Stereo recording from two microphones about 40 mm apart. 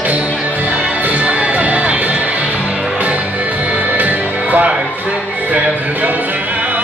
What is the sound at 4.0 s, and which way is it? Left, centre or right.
Music, right.